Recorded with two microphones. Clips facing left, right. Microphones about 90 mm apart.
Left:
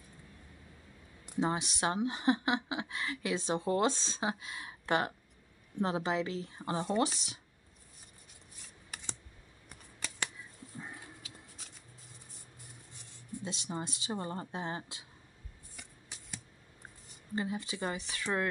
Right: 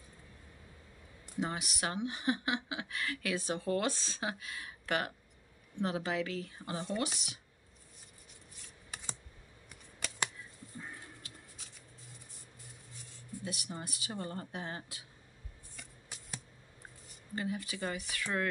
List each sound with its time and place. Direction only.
1.4 s a woman's voice: 30° left (ahead or behind)
13.4 s a woman's voice: 25° left (ahead or behind)
17.4 s a woman's voice: 25° left (ahead or behind)